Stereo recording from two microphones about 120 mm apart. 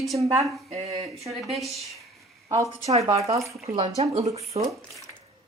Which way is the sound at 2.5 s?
25° right (ahead or behind).